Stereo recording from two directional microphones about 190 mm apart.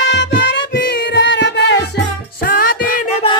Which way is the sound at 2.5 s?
50° left (ahead or behind).